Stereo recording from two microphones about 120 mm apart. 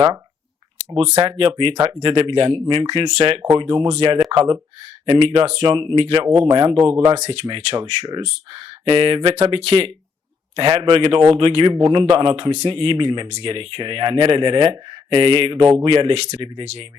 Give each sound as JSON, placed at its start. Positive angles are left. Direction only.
{"t": 0.9, "sound": "speech", "side_deg": -50}
{"t": 7.3, "sound": "speech", "side_deg": -45}